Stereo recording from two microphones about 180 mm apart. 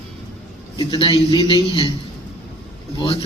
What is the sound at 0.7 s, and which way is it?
A man's voice, 30° left (ahead or behind).